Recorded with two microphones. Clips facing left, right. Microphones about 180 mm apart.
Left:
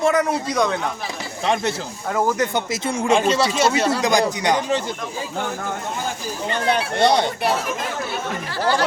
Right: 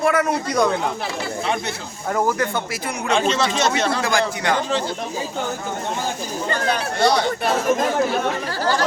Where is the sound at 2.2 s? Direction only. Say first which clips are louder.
Left 1 dB; 20° left (ahead or behind).